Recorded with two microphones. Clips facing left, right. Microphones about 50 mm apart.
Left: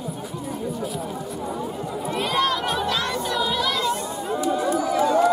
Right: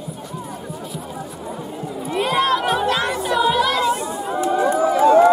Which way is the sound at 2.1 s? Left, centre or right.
Centre.